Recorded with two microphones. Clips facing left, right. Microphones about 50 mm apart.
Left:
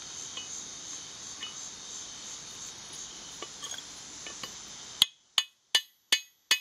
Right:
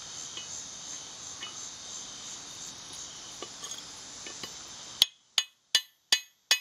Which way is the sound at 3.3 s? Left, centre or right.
Left.